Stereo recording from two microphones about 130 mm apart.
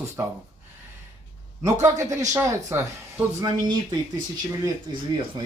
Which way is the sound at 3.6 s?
35° right (ahead or behind).